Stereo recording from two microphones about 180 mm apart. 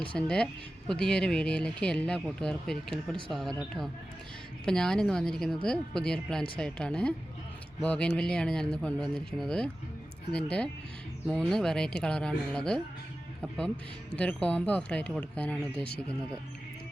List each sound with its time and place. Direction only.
0.0 s speech: 5° left (ahead or behind)
4.6 s speech: 5° left (ahead or behind)
14.2 s speech: 5° left (ahead or behind)